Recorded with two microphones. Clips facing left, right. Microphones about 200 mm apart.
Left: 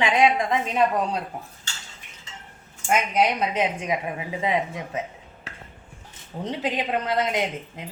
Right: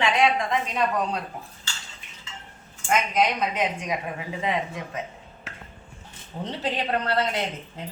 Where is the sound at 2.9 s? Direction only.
25° left (ahead or behind).